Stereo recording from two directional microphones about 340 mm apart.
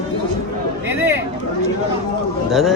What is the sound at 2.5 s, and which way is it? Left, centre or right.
Speech, centre.